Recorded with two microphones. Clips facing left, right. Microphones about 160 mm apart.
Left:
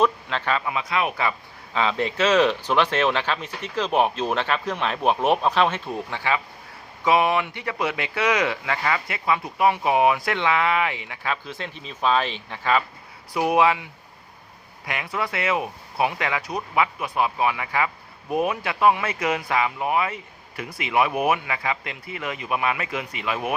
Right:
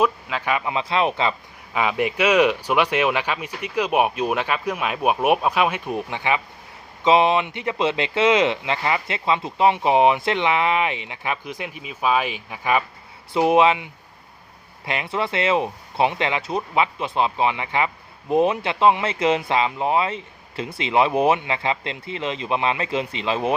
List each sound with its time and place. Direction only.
0.0 s speech: 10° right (ahead or behind)
0.7 s speech: 25° right (ahead or behind)
13.3 s speech: 25° right (ahead or behind)